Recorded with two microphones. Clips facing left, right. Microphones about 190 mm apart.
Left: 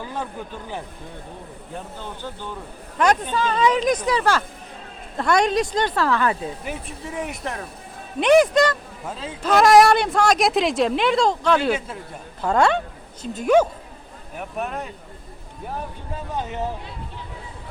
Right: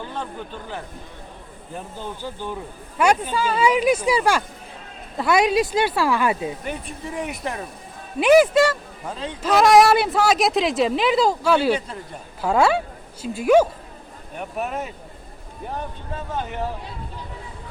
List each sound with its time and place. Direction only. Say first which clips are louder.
0.0 s speech: left 1 dB; 10° left (ahead or behind)
2.0 s speech: right 2 dB; 10° right (ahead or behind)
6.7 s speech: right 1 dB; centre (ahead or behind)
9.0 s speech: even; 5° left (ahead or behind)
16.3 s speech: even; 20° left (ahead or behind)